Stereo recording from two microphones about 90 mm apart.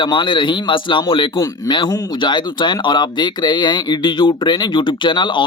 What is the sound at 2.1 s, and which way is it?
Speech, 60° left (ahead or behind).